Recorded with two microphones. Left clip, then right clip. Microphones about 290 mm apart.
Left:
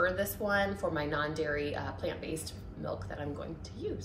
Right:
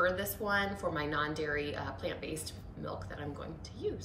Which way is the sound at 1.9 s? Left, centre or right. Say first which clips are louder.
Left 2 dB; centre.